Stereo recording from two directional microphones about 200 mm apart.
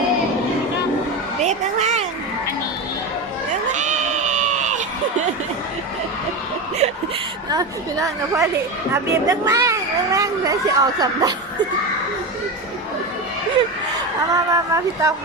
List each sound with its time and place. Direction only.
1.4 s a sound: 35° right (ahead or behind)
3.7 s cat: 35° right (ahead or behind)
7.5 s speech: 15° right (ahead or behind)
14.3 s speech: 15° right (ahead or behind)